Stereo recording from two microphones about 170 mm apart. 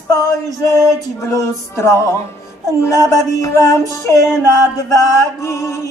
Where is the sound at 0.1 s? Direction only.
20° left (ahead or behind).